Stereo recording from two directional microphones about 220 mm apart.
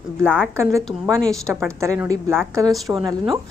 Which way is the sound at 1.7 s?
15° right (ahead or behind).